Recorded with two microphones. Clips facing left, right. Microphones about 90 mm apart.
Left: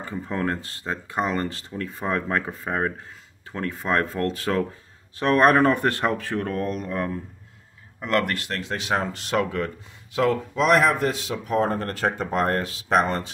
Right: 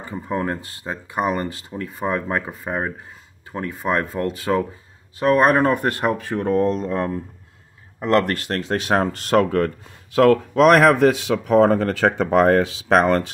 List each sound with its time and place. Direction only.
0.3 s speech: 15° right (ahead or behind); by 9.7 s 50° right (ahead or behind)
10.1 s a man's voice: 60° right (ahead or behind); by 13.3 s 80° right